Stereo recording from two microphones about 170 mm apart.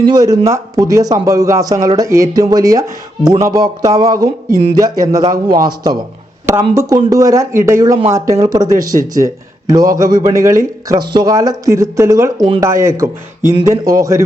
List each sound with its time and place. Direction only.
0.0 s speech: 20° right (ahead or behind)